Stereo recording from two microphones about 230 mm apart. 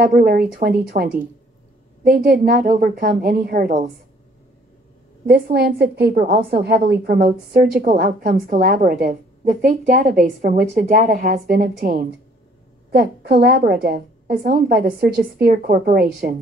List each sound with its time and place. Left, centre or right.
0.0 s a woman's voice: right
5.2 s a woman's voice: right